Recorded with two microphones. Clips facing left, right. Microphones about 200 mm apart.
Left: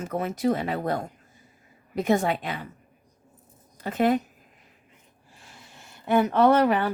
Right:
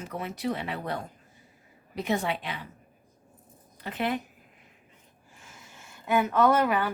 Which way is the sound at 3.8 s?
45° left (ahead or behind).